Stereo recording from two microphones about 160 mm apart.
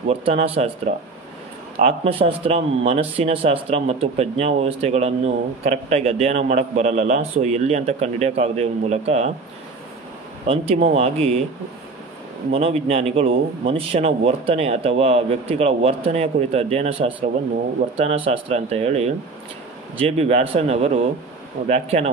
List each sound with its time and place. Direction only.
0.1 s a man's voice: 40° right (ahead or behind)
10.4 s a man's voice: 40° right (ahead or behind)
12.5 s a man's voice: 40° right (ahead or behind)